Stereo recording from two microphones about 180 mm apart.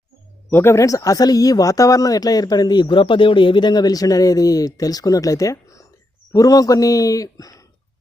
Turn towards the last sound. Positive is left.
turn(degrees=20)  # may be behind; listen again after turning